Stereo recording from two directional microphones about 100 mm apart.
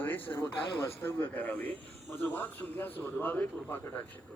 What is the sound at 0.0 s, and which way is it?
A man's voice, 20° left (ahead or behind).